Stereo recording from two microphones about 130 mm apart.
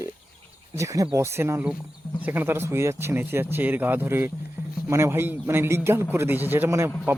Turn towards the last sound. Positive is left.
turn(degrees=-20)  # may be behind; listen again after turning